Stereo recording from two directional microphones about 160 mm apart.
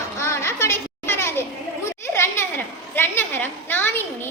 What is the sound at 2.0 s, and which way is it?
Children playing, 15° left (ahead or behind).